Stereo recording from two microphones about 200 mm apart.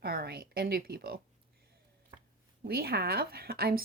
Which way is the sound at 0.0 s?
50° right (ahead or behind).